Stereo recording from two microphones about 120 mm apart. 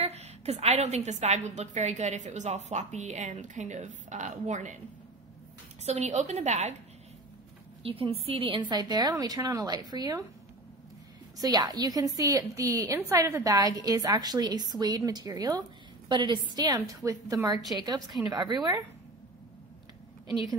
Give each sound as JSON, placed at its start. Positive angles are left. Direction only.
{"t": 0.0, "sound": "a woman's voice", "side_deg": -65}
{"t": 5.9, "sound": "a woman's voice", "side_deg": -70}
{"t": 7.8, "sound": "a woman's voice", "side_deg": -50}
{"t": 11.3, "sound": "a woman's voice", "side_deg": -35}